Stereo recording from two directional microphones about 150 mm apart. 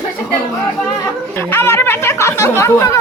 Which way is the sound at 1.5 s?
15° left (ahead or behind).